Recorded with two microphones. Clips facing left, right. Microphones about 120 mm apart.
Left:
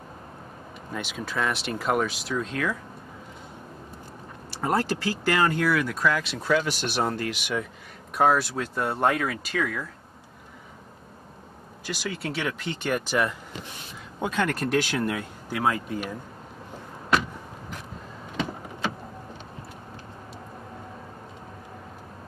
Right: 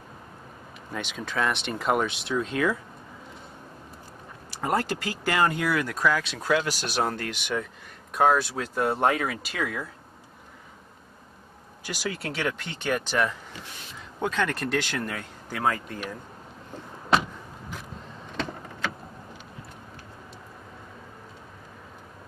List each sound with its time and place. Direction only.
0.9 s speech: 5° left (ahead or behind)
4.6 s speech: centre (ahead or behind)
11.8 s speech: 5° right (ahead or behind)